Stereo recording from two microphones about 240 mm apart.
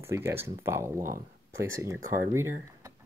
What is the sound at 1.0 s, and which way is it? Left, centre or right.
Speech, right.